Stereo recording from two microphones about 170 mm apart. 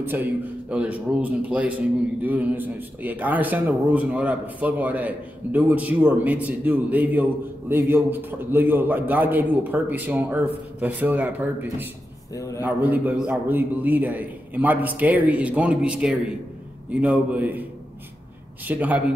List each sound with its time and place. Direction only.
0.0 s speech: 10° right (ahead or behind)
12.4 s a man's voice: 20° left (ahead or behind)
12.6 s speech: 10° right (ahead or behind)
18.7 s speech: 10° right (ahead or behind)